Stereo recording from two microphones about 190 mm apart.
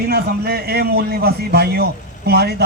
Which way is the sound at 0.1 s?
55° right (ahead or behind).